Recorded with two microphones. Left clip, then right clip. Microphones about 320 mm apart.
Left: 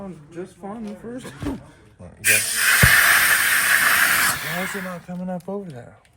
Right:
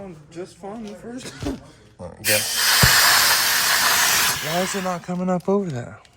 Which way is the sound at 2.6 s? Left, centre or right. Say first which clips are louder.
Left 1 dB; centre.